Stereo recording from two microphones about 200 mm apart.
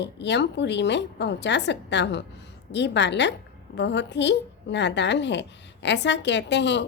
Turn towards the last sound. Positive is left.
turn(degrees=60)  # may be behind; listen again after turning